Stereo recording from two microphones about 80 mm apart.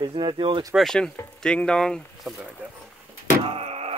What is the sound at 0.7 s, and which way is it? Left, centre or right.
Speech, centre.